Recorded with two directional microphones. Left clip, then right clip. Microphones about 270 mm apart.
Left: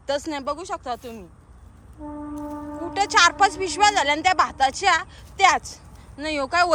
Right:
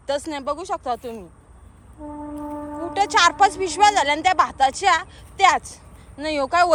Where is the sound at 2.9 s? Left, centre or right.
Centre.